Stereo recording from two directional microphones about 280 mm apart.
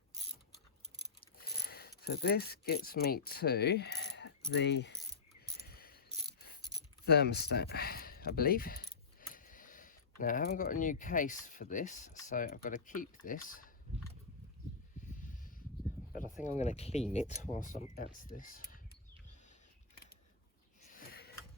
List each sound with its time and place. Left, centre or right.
1.4 s mechanisms: left
4.5 s keys jangling: left
5.5 s cricket: left
7.0 s speech: left
16.4 s speech: left
20.9 s a sound: left